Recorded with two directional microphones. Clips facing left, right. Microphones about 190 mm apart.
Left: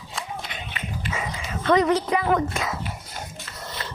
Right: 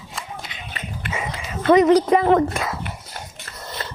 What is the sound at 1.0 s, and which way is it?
Dog, 60° right (ahead or behind).